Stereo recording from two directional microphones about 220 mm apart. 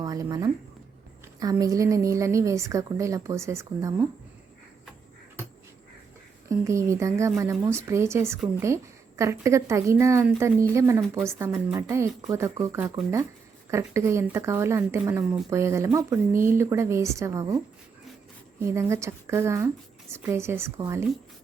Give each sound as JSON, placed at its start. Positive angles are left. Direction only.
{"t": 0.0, "sound": "a woman's voice", "side_deg": -15}
{"t": 6.5, "sound": "a woman's voice", "side_deg": -15}
{"t": 18.7, "sound": "a woman's voice", "side_deg": -10}